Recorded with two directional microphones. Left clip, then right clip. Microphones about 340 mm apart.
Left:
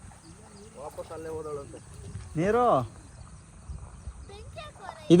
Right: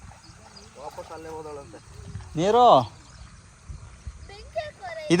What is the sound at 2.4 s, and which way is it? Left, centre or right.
Speech, centre.